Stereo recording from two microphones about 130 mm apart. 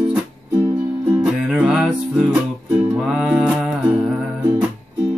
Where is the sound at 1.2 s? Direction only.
5° right (ahead or behind).